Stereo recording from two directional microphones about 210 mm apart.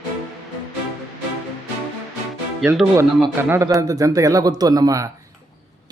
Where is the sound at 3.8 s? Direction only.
15° right (ahead or behind).